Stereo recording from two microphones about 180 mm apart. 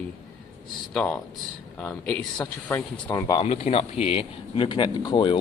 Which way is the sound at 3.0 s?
20° left (ahead or behind).